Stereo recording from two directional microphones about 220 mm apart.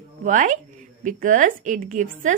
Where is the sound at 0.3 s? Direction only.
35° right (ahead or behind).